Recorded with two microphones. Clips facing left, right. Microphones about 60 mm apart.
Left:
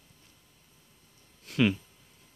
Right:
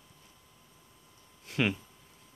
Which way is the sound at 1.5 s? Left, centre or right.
Right.